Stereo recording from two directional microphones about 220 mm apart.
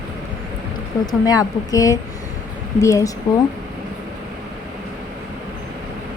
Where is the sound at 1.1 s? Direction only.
15° left (ahead or behind).